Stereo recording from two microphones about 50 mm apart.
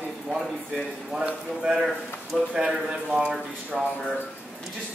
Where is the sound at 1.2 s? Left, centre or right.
Centre.